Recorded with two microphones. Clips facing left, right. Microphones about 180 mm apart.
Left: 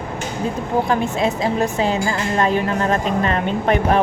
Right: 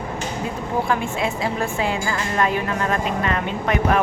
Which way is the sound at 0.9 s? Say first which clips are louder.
Left 4 dB; 40° left (ahead or behind).